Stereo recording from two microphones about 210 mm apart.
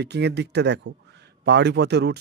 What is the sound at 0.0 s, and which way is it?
A man's voice, 50° right (ahead or behind).